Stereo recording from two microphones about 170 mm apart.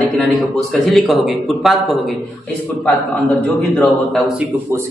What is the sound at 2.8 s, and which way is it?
A man's voice, 10° left (ahead or behind).